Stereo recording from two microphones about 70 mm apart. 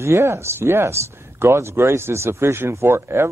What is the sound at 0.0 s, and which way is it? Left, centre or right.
Speech, right.